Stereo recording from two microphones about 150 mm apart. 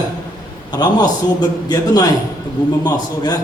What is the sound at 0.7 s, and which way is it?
Speech, 25° left (ahead or behind).